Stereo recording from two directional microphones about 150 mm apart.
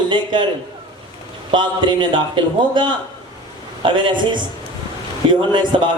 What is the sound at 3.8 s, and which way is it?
Speech, 35° right (ahead or behind).